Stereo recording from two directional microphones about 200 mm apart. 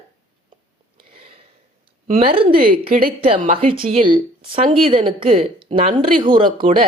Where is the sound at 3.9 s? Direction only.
25° right (ahead or behind).